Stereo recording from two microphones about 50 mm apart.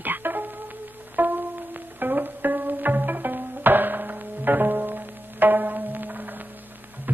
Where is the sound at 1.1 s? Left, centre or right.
Right.